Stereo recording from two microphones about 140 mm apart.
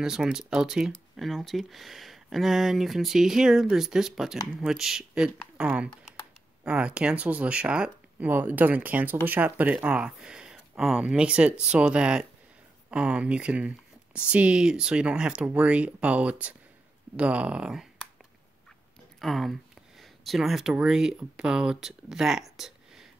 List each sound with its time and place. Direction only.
0.0 s speech: 5° right (ahead or behind)
19.2 s speech: centre (ahead or behind)